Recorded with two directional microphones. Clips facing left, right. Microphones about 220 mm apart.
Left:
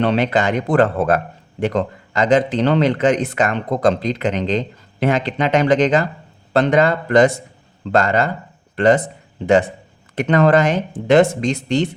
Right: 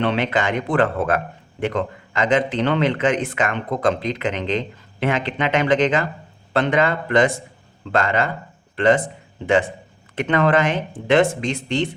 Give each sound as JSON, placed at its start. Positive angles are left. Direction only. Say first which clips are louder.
{"t": 0.0, "sound": "speech", "louder": "left 4 dB", "side_deg": 40}
{"t": 10.2, "sound": "speech", "louder": "left 4 dB", "side_deg": 40}